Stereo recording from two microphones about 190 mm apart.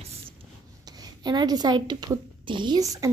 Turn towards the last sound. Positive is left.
turn(degrees=-20)  # may be behind; listen again after turning